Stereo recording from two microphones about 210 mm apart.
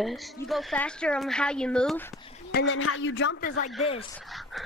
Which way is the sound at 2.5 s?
55° left (ahead or behind).